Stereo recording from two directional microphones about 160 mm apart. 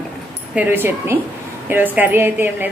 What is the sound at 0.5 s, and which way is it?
A woman's voice, 15° right (ahead or behind).